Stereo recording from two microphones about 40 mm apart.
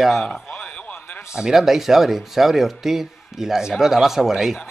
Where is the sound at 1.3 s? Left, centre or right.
Centre.